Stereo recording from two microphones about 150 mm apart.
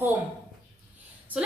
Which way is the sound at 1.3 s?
10° right (ahead or behind).